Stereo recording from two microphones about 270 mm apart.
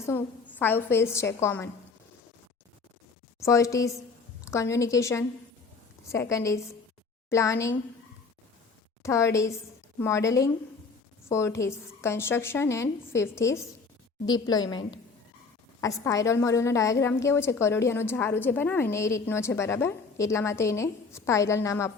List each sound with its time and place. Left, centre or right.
0.0 s a woman's voice: centre
3.4 s a woman's voice: centre
9.0 s a woman's voice: centre